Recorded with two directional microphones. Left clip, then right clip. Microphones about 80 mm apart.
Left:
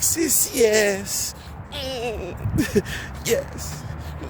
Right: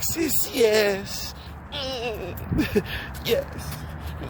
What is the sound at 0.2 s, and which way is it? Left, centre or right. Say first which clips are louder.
Speech: left 1 dB; left.